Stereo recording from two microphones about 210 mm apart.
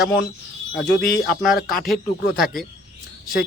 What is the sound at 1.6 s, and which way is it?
Speech, 45° left (ahead or behind).